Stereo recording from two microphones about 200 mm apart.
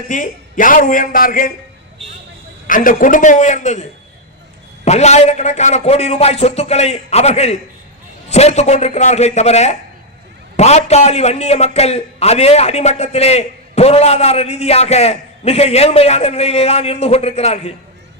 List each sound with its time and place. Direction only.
0.1 s a man's voice: 40° left (ahead or behind)
2.6 s a man's voice: 40° left (ahead or behind)
4.9 s a man's voice: 35° left (ahead or behind)